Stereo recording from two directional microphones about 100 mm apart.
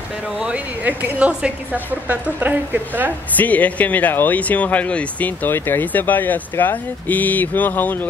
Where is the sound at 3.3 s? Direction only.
15° left (ahead or behind).